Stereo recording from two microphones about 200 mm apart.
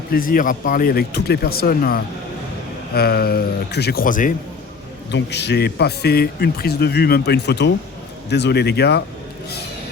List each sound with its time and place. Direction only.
0.1 s speech: 45° left (ahead or behind)
5.1 s speech: 60° left (ahead or behind)